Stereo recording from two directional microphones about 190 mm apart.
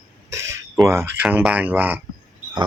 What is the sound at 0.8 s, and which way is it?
Speech, 15° right (ahead or behind).